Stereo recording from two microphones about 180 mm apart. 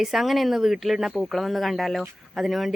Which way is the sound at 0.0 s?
Centre (ahead or behind).